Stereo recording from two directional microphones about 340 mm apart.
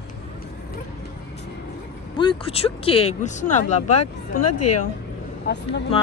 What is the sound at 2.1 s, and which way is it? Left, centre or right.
A woman's voice, centre.